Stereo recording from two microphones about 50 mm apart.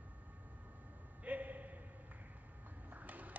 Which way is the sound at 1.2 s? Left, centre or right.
Right.